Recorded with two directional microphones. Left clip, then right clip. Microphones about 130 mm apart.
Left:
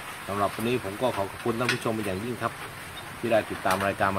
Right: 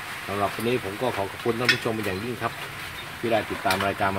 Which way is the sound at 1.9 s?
15° left (ahead or behind).